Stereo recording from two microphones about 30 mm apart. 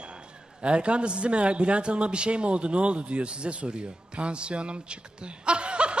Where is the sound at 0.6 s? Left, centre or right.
Right.